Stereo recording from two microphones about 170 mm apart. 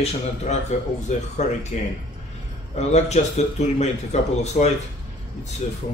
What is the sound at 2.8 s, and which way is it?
Speech, 40° left (ahead or behind).